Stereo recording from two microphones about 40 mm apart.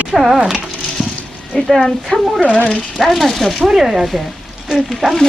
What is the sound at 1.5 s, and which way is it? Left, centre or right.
Speech, centre.